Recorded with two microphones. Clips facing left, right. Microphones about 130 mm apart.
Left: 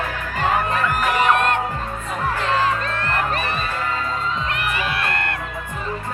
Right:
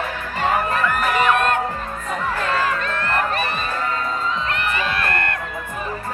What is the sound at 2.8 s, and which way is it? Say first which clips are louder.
Music: right 1 dB; 30° left (ahead or behind).